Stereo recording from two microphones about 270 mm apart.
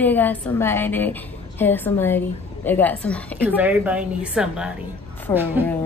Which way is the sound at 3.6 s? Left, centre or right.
Centre.